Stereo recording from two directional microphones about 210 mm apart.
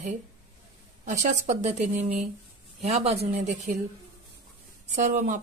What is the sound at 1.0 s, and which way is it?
Speech, 35° right (ahead or behind).